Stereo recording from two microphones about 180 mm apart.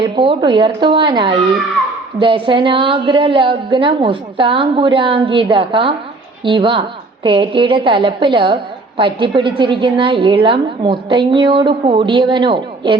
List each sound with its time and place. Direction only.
0.0 s a woman's voice: 30° right (ahead or behind)